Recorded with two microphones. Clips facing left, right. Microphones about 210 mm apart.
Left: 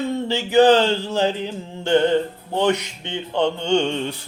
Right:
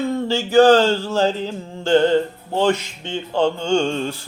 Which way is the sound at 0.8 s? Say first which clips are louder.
Right 2 dB; 20° left (ahead or behind).